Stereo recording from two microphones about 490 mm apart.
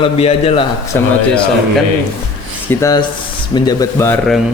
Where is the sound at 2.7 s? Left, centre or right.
Centre.